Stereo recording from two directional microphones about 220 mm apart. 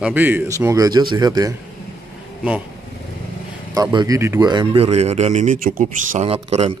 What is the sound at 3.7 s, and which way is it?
Speech, 15° right (ahead or behind).